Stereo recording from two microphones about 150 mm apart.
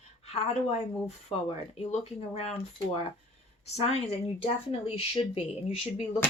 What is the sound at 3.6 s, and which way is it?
Speech, 45° left (ahead or behind).